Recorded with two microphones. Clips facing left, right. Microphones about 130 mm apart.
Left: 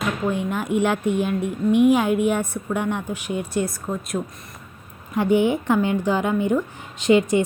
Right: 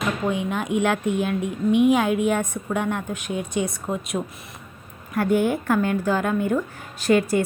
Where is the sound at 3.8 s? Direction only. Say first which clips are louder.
Even; centre (ahead or behind).